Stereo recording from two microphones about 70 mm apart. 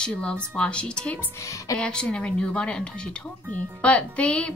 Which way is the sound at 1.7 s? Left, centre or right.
Centre.